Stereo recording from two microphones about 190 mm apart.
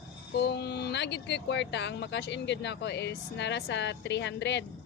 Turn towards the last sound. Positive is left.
turn(degrees=65)  # may be behind; listen again after turning